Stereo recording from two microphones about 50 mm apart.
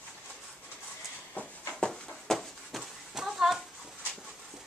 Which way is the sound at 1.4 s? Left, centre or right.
Left.